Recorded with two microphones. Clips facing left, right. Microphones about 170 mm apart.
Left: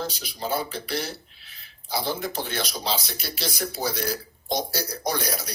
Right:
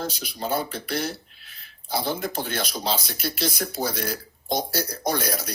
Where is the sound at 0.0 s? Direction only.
50° right (ahead or behind).